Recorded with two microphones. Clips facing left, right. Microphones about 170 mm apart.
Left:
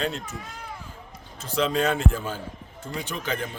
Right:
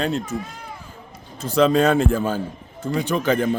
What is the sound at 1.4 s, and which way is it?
Speech, 45° right (ahead or behind).